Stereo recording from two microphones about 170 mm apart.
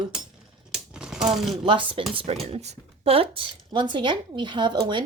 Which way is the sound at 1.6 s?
30° right (ahead or behind).